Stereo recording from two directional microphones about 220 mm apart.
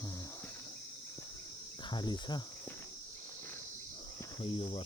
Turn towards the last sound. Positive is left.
turn(degrees=25)  # may be behind; listen again after turning